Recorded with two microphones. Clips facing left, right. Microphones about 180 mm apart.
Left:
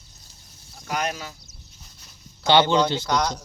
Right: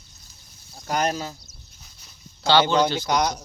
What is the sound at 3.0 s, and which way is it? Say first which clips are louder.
Speech: right 1 dB; 10° right (ahead or behind).